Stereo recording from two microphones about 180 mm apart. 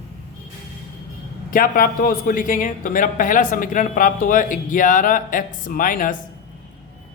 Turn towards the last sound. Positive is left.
turn(degrees=50)  # may be behind; listen again after turning